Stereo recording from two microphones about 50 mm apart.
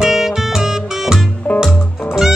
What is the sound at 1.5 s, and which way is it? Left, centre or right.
Music, left.